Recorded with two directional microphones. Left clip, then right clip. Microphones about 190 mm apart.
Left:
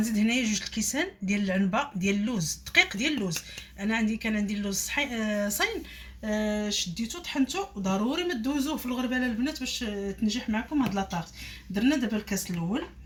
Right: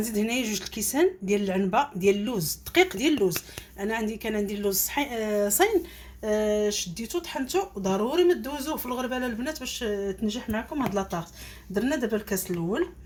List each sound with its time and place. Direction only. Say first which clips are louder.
0.0 s speech: even; 45° right (ahead or behind)